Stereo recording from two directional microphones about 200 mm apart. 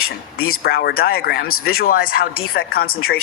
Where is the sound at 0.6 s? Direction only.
50° left (ahead or behind).